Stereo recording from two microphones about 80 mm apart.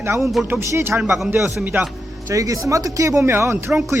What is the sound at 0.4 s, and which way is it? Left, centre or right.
Speech, right.